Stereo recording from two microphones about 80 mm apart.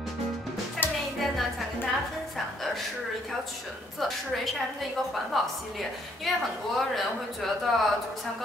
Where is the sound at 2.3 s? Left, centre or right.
Centre.